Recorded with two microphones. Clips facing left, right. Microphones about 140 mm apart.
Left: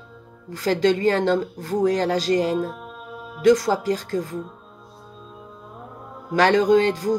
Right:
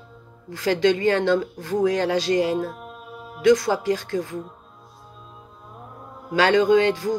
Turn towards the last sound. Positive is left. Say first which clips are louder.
# left 1 dB
turn(degrees=40)  # may be behind; listen again after turning